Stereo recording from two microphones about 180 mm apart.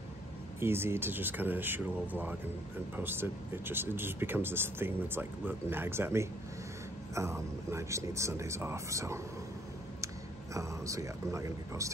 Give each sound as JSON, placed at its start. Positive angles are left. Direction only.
{"t": 0.6, "sound": "speech", "side_deg": -15}